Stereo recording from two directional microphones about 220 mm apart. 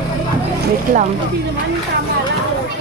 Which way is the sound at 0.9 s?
40° right (ahead or behind).